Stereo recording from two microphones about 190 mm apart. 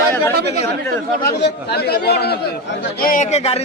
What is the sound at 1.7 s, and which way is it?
Speech, 55° left (ahead or behind).